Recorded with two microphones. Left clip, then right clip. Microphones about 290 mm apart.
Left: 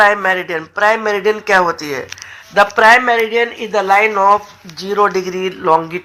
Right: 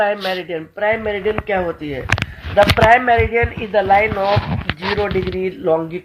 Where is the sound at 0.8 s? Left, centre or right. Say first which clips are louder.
Left 5 dB; left.